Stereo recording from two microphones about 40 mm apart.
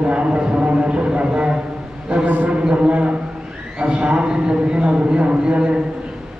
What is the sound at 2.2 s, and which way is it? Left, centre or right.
Speech, right.